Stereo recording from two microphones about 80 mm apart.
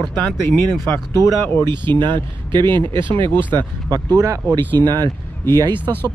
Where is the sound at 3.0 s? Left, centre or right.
Right.